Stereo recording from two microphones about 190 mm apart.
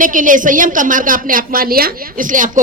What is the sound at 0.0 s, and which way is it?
A woman's voice, 45° right (ahead or behind).